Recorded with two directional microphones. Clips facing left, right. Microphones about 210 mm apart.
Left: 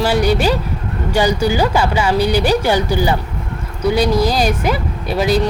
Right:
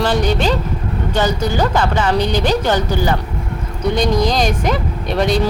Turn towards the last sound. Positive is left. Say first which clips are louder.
# even
turn(degrees=5)  # may be behind; listen again after turning